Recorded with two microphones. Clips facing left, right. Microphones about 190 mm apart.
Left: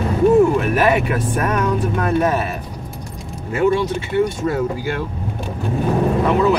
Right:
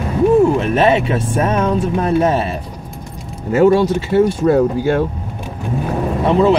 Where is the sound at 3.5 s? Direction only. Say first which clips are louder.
Right 6 dB; 40° right (ahead or behind).